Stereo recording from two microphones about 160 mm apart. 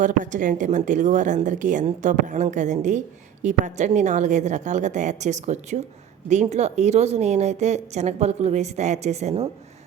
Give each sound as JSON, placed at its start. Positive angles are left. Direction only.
{"t": 0.0, "sound": "a woman's voice", "side_deg": -50}